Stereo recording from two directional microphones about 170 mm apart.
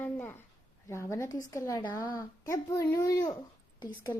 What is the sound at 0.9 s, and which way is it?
Speech, 15° left (ahead or behind).